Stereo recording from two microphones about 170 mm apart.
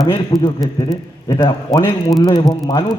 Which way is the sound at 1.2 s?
20° left (ahead or behind).